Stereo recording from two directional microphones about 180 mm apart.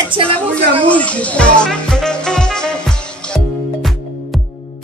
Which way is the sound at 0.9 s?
5° left (ahead or behind).